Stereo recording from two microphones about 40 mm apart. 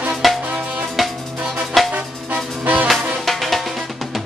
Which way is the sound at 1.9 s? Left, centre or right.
Right.